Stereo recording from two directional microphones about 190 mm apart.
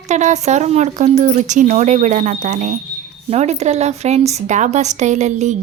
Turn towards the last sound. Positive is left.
turn(degrees=-40)  # may be behind; listen again after turning